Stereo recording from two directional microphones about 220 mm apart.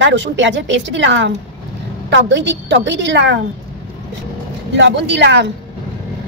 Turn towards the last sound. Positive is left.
turn(degrees=-50)  # may be behind; listen again after turning